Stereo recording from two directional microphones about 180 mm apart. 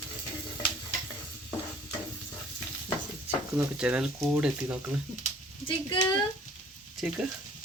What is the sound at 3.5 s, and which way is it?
Speech, 5° right (ahead or behind).